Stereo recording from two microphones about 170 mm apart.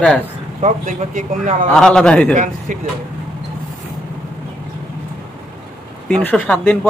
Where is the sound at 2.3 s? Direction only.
50° right (ahead or behind).